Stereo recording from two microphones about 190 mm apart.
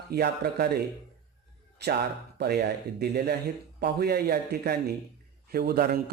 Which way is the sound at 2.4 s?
60° right (ahead or behind).